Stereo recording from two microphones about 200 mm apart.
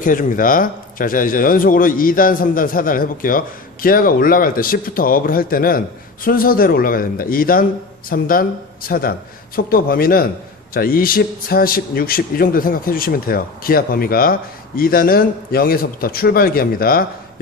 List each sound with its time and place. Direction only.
0.0 s speech: 45° left (ahead or behind)